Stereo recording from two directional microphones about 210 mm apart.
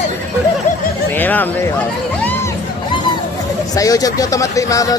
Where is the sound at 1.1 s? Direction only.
10° left (ahead or behind).